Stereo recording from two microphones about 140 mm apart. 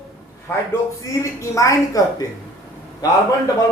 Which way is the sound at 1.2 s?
20° left (ahead or behind).